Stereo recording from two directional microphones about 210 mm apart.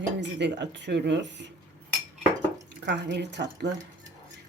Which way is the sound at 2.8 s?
55° right (ahead or behind).